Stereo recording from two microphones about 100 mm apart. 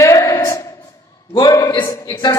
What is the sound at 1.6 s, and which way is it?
Speech, 50° left (ahead or behind).